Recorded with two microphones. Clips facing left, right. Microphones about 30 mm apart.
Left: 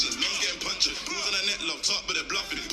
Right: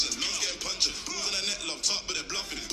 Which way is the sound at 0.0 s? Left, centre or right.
Centre.